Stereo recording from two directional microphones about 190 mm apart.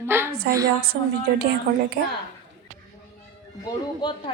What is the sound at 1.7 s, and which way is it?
Speech, 55° right (ahead or behind).